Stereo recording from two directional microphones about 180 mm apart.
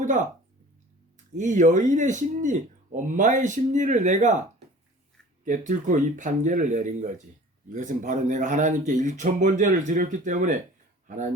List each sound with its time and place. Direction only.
1.4 s speech: 45° right (ahead or behind)
5.5 s speech: 45° right (ahead or behind)